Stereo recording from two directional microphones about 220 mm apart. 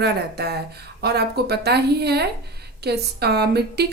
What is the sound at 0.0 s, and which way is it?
A woman's voice, 45° right (ahead or behind).